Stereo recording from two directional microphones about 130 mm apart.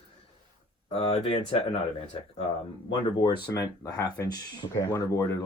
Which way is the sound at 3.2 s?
30° left (ahead or behind).